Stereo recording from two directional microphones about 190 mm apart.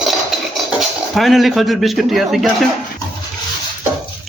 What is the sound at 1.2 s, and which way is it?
A man's voice, centre (ahead or behind).